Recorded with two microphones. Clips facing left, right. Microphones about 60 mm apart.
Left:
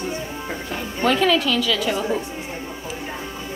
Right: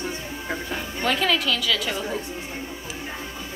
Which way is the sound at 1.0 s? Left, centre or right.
Centre.